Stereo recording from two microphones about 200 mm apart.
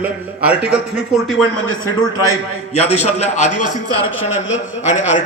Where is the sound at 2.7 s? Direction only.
35° left (ahead or behind).